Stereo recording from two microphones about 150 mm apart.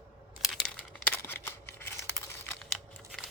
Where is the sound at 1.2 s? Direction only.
15° left (ahead or behind).